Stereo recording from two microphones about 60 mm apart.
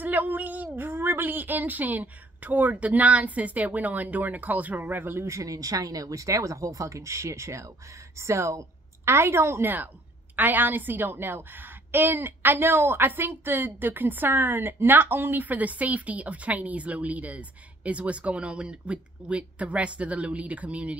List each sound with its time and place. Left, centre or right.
0.0 s a sound: right
0.7 s a woman's voice: right
5.2 s a woman's voice: right
10.3 s a woman's voice: right